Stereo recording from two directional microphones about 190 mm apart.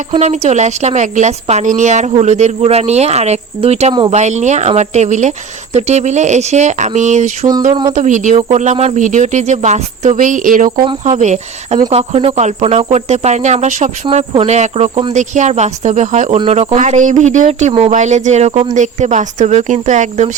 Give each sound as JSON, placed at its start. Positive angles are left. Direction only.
{"t": 0.1, "sound": "speech", "side_deg": -35}
{"t": 7.7, "sound": "speech", "side_deg": -25}
{"t": 7.9, "sound": "speech", "side_deg": -40}